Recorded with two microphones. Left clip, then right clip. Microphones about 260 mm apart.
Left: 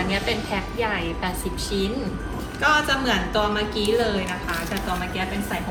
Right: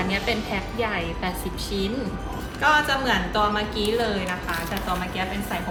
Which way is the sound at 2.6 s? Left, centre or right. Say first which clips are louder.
Even; centre.